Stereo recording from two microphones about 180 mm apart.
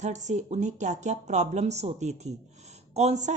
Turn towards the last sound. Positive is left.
turn(degrees=-40)  # may be behind; listen again after turning